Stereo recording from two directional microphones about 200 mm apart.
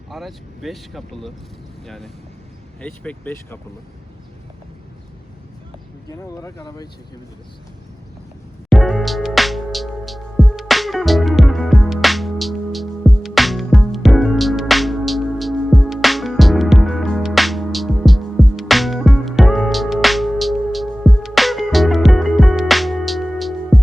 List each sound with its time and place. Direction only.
0.1 s speech: centre (ahead or behind)
2.8 s speech: 5° left (ahead or behind)
6.1 s speech: 20° left (ahead or behind)
8.7 s music: centre (ahead or behind)